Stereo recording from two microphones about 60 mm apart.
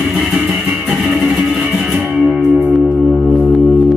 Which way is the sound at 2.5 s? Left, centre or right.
Right.